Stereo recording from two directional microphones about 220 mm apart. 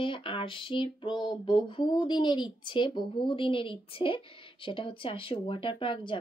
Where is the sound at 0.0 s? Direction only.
20° left (ahead or behind).